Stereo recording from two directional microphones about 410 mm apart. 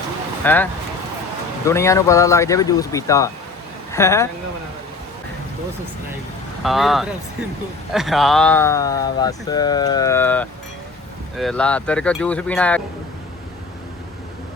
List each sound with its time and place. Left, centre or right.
0.4 s speech: centre
6.6 s speech: centre